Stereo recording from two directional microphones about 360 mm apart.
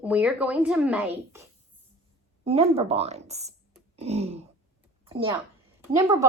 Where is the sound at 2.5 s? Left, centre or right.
Centre.